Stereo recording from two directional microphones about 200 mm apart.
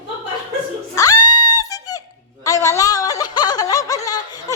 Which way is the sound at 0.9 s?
20° left (ahead or behind).